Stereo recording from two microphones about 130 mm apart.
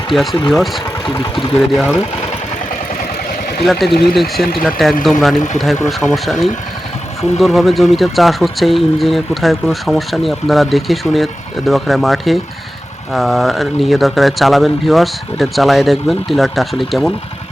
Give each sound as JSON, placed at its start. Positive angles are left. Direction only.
{"t": 0.1, "sound": "speech", "side_deg": 0}
{"t": 3.6, "sound": "speech", "side_deg": 0}